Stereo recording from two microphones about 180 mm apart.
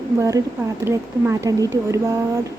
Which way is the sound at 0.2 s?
15° right (ahead or behind).